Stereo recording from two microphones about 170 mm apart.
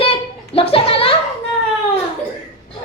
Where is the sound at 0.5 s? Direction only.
35° left (ahead or behind).